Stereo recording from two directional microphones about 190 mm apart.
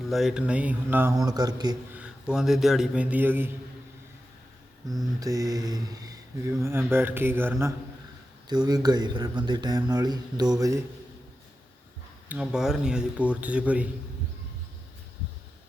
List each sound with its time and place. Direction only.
0.0 s speech: centre (ahead or behind); by 1.7 s 20° right (ahead or behind)
2.0 s a man's voice: 5° right (ahead or behind)
5.2 s speech: 20° right (ahead or behind)
12.3 s speech: 5° right (ahead or behind)